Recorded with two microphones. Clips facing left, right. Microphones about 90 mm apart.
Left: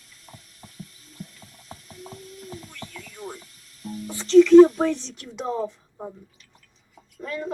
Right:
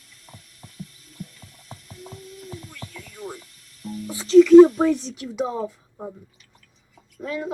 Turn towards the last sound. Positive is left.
turn(degrees=-5)  # may be behind; listen again after turning